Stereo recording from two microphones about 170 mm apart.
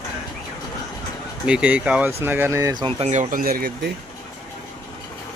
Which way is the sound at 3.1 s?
50° right (ahead or behind).